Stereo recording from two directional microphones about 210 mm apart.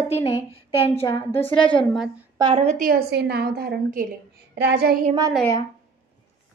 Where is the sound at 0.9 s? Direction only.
10° left (ahead or behind).